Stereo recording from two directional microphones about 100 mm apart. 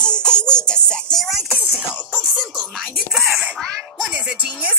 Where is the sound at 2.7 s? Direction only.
5° right (ahead or behind).